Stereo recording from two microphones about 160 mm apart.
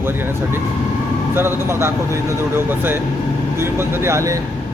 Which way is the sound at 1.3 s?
15° right (ahead or behind).